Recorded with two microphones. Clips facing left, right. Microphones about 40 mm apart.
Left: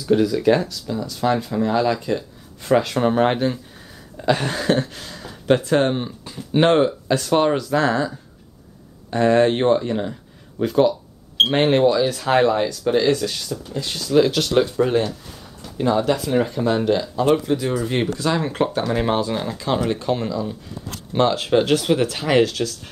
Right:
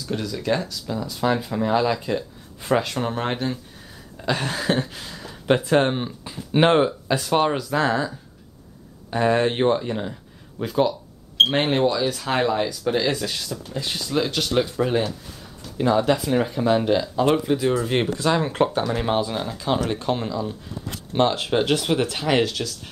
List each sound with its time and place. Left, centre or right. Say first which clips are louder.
0.0 s speech: left 10 dB; centre
0.8 s speech: right 2 dB; centre
3.0 s speech: left 7 dB; centre
9.1 s speech: left 4 dB; centre
13.1 s speech: left 4 dB; centre
14.1 s speech: left 6 dB; centre
19.0 s speech: left 2 dB; centre
20.0 s speech: left 2 dB; centre
21.9 s speech: left 3 dB; centre